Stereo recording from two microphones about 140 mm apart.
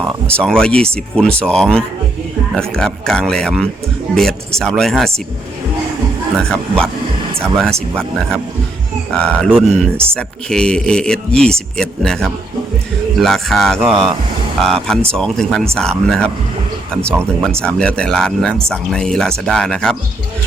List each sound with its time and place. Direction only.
0.3 s speech: 5° left (ahead or behind)
6.5 s speech: 5° left (ahead or behind)
17.5 s speech: 5° left (ahead or behind)